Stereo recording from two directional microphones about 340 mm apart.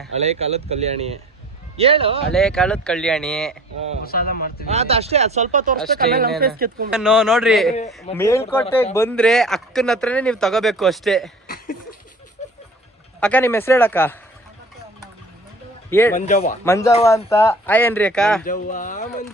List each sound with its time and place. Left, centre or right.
0.2 s speech: centre
2.3 s speech: centre
4.0 s speech: left
4.7 s speech: centre
6.9 s speech: centre
11.4 s a sound: left
13.1 s speech: centre
15.9 s speech: centre
16.1 s speech: left
16.6 s speech: centre
18.4 s speech: left